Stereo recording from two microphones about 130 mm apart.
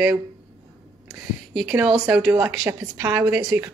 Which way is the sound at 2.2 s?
10° right (ahead or behind).